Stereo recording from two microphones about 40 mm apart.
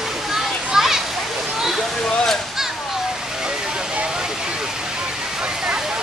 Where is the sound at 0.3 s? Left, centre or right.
Centre.